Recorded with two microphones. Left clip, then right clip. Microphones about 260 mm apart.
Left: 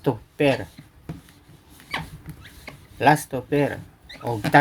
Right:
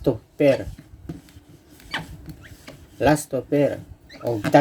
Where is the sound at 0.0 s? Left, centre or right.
Left.